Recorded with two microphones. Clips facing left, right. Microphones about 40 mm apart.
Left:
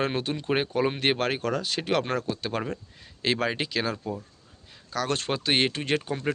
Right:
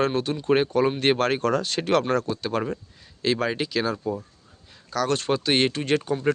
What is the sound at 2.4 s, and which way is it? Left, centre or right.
Speech, left.